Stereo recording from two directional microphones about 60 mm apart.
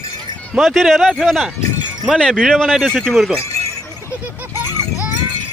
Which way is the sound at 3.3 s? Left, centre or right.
Left.